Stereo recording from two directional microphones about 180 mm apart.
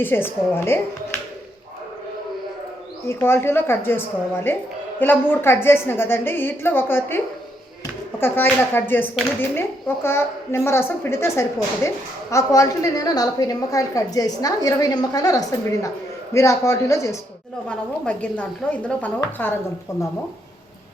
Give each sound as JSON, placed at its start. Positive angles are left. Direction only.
{"t": 0.0, "sound": "a woman's voice", "side_deg": 10}
{"t": 3.1, "sound": "a woman's voice", "side_deg": 15}
{"t": 8.2, "sound": "a woman's voice", "side_deg": 10}
{"t": 17.7, "sound": "a woman's voice", "side_deg": 5}